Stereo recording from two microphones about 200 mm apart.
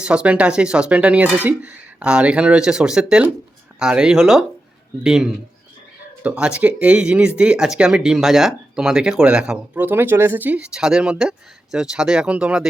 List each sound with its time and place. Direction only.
0.0 s speech: 5° right (ahead or behind)